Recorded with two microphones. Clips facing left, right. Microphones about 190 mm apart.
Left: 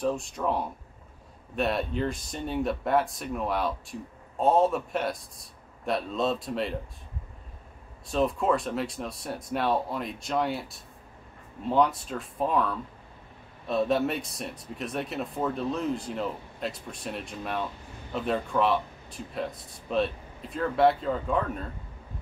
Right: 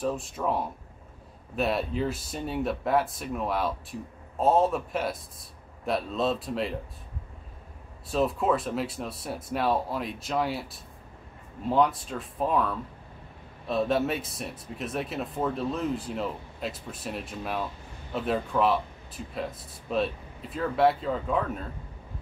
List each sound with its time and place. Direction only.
0.0 s speech: centre (ahead or behind)
8.1 s speech: centre (ahead or behind)